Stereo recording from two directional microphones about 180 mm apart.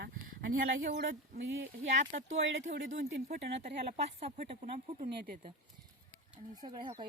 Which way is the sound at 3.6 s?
40° right (ahead or behind).